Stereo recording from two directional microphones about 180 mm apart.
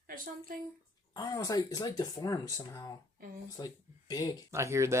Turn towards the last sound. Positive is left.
turn(degrees=-15)  # may be behind; listen again after turning